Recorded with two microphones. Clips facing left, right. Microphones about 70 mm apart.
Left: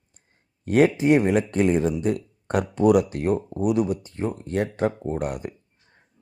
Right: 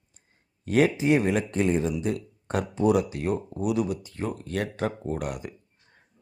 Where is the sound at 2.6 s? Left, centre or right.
Left.